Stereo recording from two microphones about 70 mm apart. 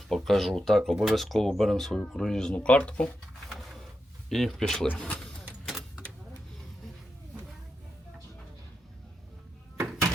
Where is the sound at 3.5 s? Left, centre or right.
Centre.